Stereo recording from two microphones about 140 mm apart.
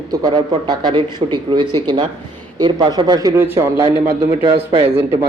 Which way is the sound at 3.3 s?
15° right (ahead or behind).